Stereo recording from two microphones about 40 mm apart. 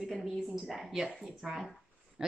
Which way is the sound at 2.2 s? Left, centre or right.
Centre.